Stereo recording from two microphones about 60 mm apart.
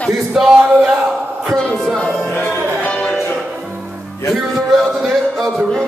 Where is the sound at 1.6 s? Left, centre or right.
Centre.